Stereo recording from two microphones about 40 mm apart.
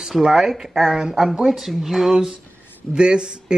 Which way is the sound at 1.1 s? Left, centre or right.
Centre.